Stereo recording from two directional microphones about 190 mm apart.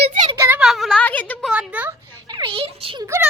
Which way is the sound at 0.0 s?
45° right (ahead or behind).